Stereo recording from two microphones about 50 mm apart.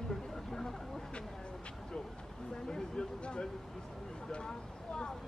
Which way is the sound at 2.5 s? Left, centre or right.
Centre.